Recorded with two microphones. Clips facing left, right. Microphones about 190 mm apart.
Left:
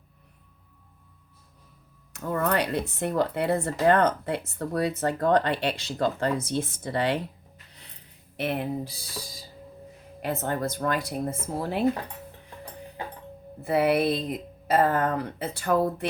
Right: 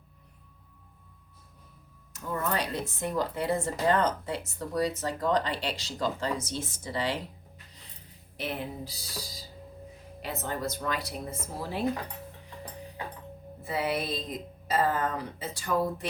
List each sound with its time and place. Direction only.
2.1 s speech: 60° left (ahead or behind)
7.7 s music: 65° left (ahead or behind)
8.4 s speech: 60° left (ahead or behind)
13.7 s speech: 60° left (ahead or behind)